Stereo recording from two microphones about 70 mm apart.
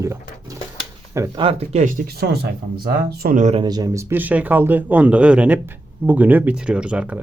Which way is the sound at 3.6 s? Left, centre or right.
Right.